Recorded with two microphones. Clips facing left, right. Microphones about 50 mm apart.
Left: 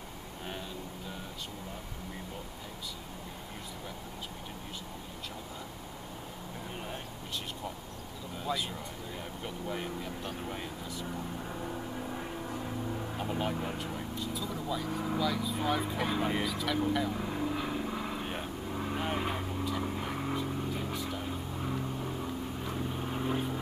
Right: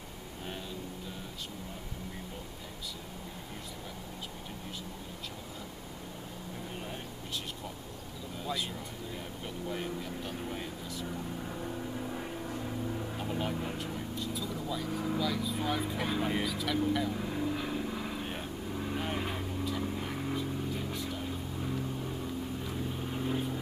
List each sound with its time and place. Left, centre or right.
8.4 s vehicle: centre